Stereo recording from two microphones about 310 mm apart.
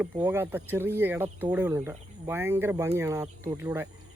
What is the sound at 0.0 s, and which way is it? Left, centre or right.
Speech, centre.